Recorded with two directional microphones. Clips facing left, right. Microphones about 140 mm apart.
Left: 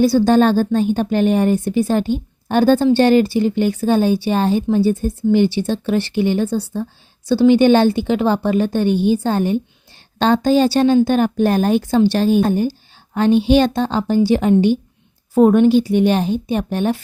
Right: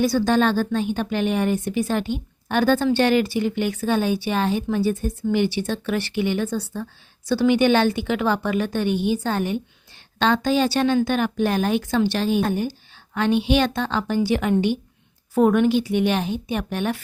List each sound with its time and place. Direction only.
0.0 s a woman's voice: 30° left (ahead or behind)